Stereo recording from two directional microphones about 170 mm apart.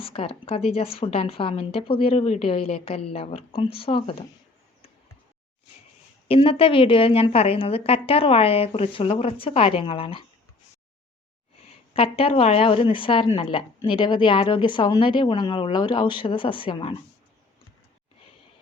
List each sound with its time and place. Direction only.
0.0 s speech: 30° left (ahead or behind)
6.2 s speech: 35° left (ahead or behind)
11.9 s speech: 35° left (ahead or behind)